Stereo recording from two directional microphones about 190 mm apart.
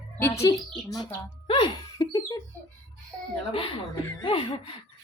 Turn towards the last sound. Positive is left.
turn(degrees=30)  # may be behind; listen again after turning